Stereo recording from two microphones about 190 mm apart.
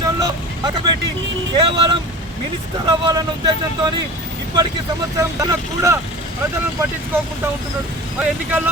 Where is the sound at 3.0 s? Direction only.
25° right (ahead or behind).